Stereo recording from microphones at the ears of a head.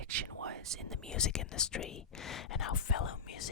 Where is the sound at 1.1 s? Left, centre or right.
Left.